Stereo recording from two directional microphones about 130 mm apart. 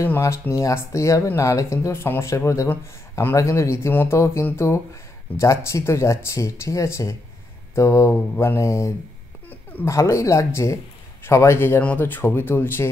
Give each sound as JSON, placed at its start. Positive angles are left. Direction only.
{"t": 0.0, "sound": "speech", "side_deg": 20}